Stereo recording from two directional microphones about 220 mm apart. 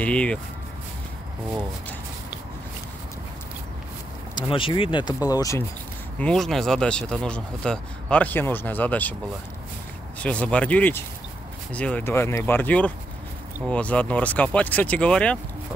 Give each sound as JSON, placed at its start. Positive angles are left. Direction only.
{"t": 0.0, "sound": "speech", "side_deg": 5}
{"t": 4.4, "sound": "speech", "side_deg": 25}
{"t": 6.1, "sound": "speech", "side_deg": 5}
{"t": 10.2, "sound": "speech", "side_deg": 5}